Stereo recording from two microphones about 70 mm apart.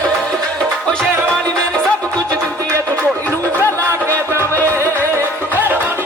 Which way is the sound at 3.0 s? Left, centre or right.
Left.